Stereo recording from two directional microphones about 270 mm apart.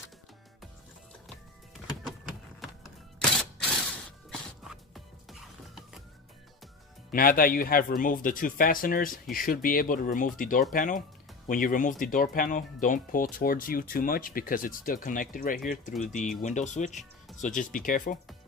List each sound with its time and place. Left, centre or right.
3.2 s a sound: centre
4.3 s music: centre
7.1 s speech: left
15.9 s speech: centre
16.4 s speech: left